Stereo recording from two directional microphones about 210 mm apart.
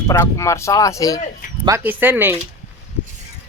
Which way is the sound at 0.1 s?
15° left (ahead or behind).